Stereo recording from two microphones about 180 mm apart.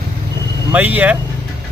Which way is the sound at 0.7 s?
10° right (ahead or behind).